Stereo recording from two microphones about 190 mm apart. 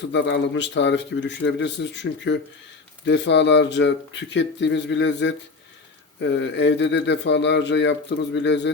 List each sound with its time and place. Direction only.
0.1 s a man's voice: 70° left (ahead or behind)